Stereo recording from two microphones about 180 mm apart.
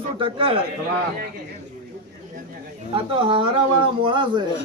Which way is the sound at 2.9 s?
30° right (ahead or behind).